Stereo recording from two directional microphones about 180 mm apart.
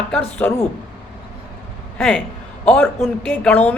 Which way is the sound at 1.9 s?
5° left (ahead or behind).